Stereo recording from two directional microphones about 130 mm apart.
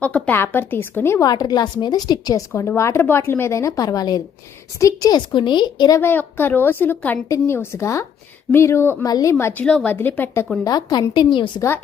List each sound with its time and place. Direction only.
0.0 s a woman's voice: 10° left (ahead or behind)
1.2 s a woman's voice: 30° left (ahead or behind)
2.5 s a woman's voice: 20° left (ahead or behind)
6.0 s a woman's voice: 15° left (ahead or behind)
9.0 s a woman's voice: 30° left (ahead or behind)
9.4 s a woman's voice: 15° left (ahead or behind)
10.6 s a woman's voice: 30° left (ahead or behind)